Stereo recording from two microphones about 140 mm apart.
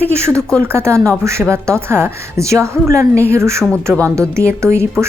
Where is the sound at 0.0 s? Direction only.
20° right (ahead or behind).